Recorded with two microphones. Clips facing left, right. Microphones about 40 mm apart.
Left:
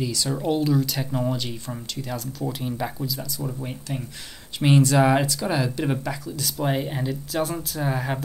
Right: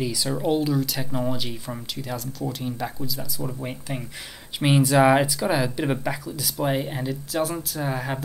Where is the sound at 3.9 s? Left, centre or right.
Right.